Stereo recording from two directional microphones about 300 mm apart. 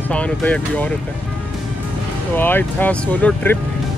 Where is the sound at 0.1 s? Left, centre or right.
Centre.